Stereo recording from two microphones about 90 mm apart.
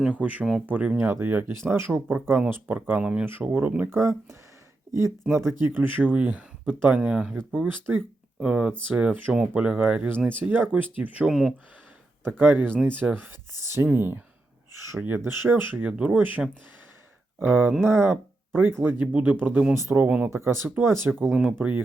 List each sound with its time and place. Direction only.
0.1 s speech: 15° right (ahead or behind)
3.2 s speech: 20° right (ahead or behind)
3.8 s speech: 30° right (ahead or behind)
5.5 s speech: 25° right (ahead or behind)
8.4 s speech: 10° right (ahead or behind)
11.3 s speech: 5° right (ahead or behind)
12.2 s speech: 25° right (ahead or behind)
17.4 s speech: 25° right (ahead or behind)
20.1 s speech: 15° right (ahead or behind)
20.3 s speech: 30° right (ahead or behind)